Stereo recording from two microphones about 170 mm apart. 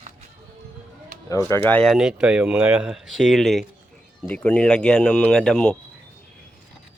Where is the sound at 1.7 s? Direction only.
5° left (ahead or behind).